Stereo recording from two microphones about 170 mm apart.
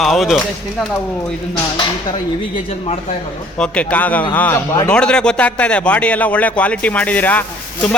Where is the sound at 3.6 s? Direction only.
5° left (ahead or behind).